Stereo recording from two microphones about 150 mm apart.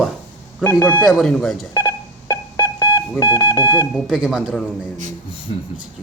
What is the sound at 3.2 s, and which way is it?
Speech, 20° left (ahead or behind).